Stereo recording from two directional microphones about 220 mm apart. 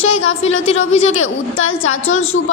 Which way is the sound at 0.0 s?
70° left (ahead or behind).